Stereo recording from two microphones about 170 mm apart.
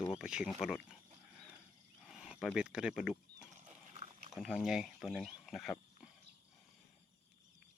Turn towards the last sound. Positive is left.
turn(degrees=0)  # may be behind; listen again after turning